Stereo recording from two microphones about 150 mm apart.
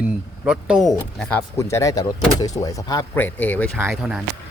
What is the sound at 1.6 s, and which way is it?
Speech, 20° left (ahead or behind).